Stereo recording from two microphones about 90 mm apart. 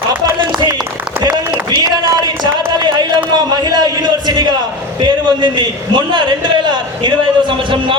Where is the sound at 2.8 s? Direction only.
55° right (ahead or behind).